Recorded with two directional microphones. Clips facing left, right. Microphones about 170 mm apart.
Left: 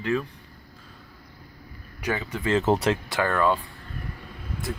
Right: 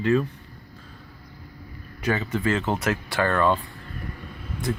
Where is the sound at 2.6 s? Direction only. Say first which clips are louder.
Left 3 dB; 35° left (ahead or behind).